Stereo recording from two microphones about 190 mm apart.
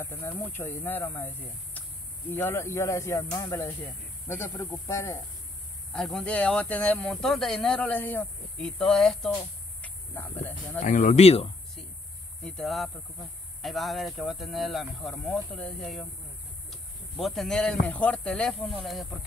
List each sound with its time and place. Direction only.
0.0 s speech: 15° left (ahead or behind)
5.9 s speech: centre (ahead or behind)
10.8 s speech: 40° left (ahead or behind)
12.4 s speech: centre (ahead or behind)